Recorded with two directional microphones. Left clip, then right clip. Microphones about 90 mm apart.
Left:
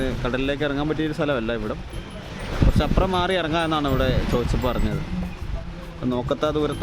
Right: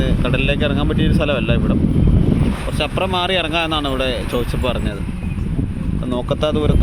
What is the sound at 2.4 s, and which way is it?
Boat, 40° right (ahead or behind).